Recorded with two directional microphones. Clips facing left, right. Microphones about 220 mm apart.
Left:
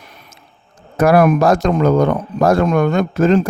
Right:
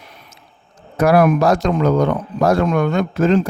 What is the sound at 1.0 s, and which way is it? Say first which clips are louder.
A man's voice: left 2 dB; 50° left (ahead or behind).